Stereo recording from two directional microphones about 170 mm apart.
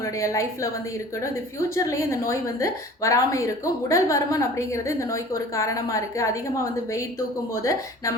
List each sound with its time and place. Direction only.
0.0 s a woman's voice: 20° left (ahead or behind)
1.7 s a woman's voice: 20° left (ahead or behind)
7.5 s a woman's voice: 20° left (ahead or behind)